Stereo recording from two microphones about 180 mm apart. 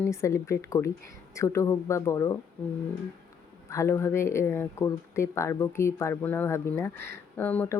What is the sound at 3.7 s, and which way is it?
Speech, 15° left (ahead or behind).